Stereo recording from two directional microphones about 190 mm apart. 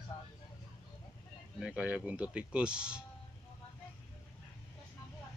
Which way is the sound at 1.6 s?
5° right (ahead or behind).